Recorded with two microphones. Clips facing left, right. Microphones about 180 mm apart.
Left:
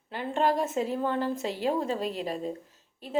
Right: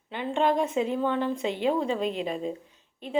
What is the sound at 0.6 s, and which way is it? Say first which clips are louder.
Speech: right 2 dB; 45° left (ahead or behind).